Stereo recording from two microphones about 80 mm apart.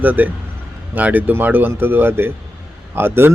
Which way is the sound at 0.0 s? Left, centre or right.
Right.